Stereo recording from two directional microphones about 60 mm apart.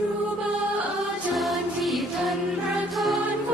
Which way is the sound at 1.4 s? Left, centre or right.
Centre.